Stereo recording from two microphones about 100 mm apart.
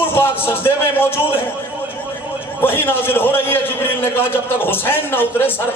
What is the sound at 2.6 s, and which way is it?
A man's voice, 20° left (ahead or behind).